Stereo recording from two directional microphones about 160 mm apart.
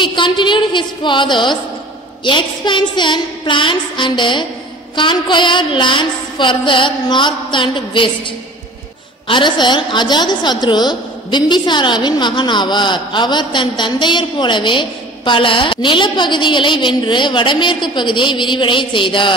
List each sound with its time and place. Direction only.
0.0 s a woman's voice: 30° left (ahead or behind)
4.9 s a sound: 30° left (ahead or behind)
9.3 s a woman's voice: 30° left (ahead or behind)